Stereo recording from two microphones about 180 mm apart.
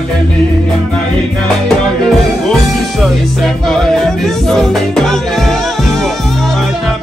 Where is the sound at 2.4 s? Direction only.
Centre (ahead or behind).